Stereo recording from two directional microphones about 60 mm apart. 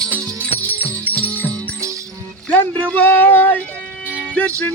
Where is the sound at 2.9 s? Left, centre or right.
Left.